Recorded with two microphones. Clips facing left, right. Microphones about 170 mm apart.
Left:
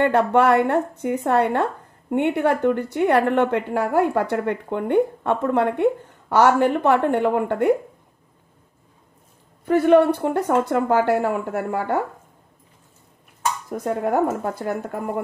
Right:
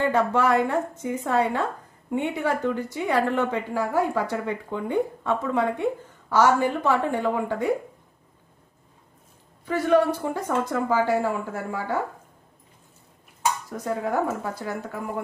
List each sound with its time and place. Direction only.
0.0 s a woman's voice: 65° left (ahead or behind)
9.7 s a woman's voice: 60° left (ahead or behind)
13.7 s a woman's voice: 55° left (ahead or behind)